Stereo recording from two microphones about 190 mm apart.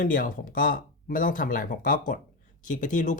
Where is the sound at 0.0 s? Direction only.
45° left (ahead or behind).